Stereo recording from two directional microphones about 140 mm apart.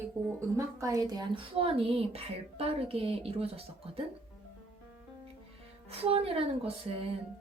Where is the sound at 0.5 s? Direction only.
25° right (ahead or behind); by 4.0 s 45° right (ahead or behind).